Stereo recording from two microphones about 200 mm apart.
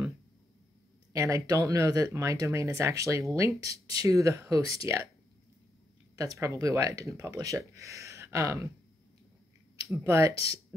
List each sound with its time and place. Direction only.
1.1 s speech: 15° right (ahead or behind)
6.1 s speech: 15° right (ahead or behind)
10.0 s speech: 15° right (ahead or behind)